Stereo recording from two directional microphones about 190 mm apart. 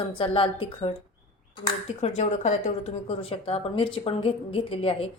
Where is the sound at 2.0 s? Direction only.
35° left (ahead or behind).